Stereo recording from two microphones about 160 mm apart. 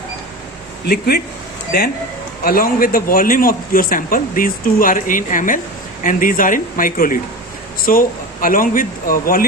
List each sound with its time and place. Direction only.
0.9 s speech: 75° left (ahead or behind)
2.4 s a man's voice: 65° left (ahead or behind)